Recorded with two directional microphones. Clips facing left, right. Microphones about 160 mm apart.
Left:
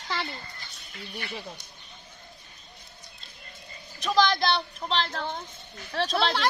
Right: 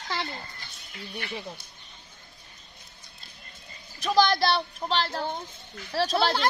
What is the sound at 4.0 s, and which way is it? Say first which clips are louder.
Speech: right 1 dB; 10° right (ahead or behind).